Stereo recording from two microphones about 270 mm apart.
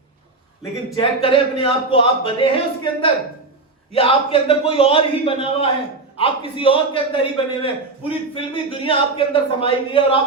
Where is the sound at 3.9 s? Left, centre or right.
Left.